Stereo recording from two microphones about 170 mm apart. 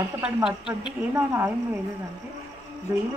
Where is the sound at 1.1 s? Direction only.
15° right (ahead or behind).